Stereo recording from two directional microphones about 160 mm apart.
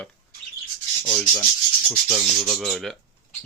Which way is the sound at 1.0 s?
5° left (ahead or behind).